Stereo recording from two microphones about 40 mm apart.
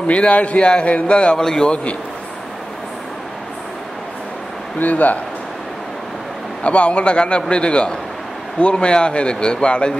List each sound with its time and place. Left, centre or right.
0.0 s a man's voice: left
1.4 s a man's voice: centre
4.7 s speech: left
6.6 s a man's voice: left